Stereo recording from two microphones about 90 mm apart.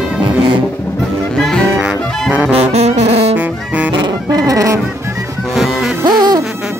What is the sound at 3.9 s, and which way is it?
Music, 45° right (ahead or behind).